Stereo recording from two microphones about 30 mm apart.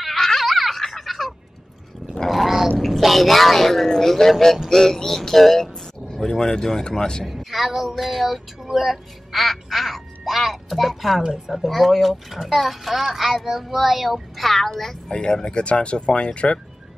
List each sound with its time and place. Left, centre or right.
0.0 s a sound: centre
1.0 s a sound: centre
2.2 s gargling: centre
2.8 s speech: centre; by 7.2 s left
7.2 s a woman's voice: centre
9.3 s a child's voice: centre
15.0 s speech: left